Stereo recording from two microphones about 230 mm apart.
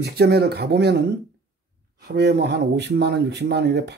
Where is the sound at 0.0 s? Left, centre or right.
Right.